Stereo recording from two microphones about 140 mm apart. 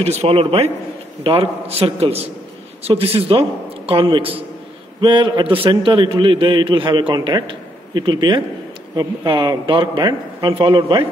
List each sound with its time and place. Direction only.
0.0 s a man's voice: 45° right (ahead or behind)